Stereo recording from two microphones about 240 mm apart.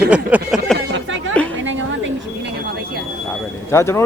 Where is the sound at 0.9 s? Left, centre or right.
Right.